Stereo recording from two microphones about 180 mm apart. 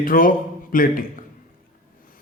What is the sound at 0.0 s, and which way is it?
A man's voice, 50° left (ahead or behind).